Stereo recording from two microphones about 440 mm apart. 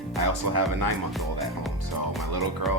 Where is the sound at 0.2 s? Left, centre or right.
Right.